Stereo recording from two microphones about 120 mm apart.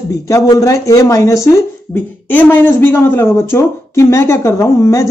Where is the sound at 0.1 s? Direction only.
30° left (ahead or behind).